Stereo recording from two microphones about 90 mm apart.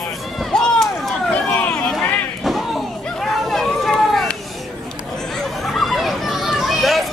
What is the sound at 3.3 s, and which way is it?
Run, 5° left (ahead or behind).